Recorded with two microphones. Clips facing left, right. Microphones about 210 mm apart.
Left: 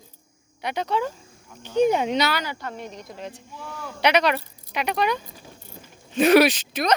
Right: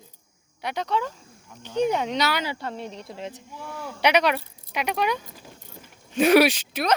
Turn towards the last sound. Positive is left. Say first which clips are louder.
# left 1 dB
turn(degrees=-10)  # may be behind; listen again after turning